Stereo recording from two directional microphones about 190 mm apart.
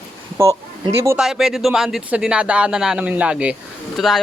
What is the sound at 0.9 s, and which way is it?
Speech, 15° right (ahead or behind).